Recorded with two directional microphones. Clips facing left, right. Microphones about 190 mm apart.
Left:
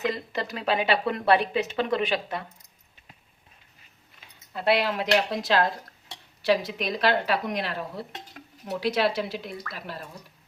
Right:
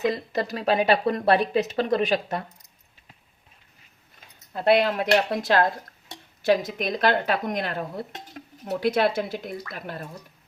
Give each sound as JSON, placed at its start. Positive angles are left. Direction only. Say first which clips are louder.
{"t": 0.1, "sound": "speech", "louder": "right 3 dB", "side_deg": -40}
{"t": 4.5, "sound": "speech", "louder": "right 4 dB", "side_deg": -50}